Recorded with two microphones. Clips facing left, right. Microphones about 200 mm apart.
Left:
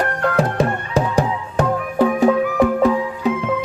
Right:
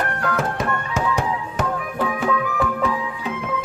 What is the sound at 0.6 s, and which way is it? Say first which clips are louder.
Music: left 5 dB; 35° left (ahead or behind).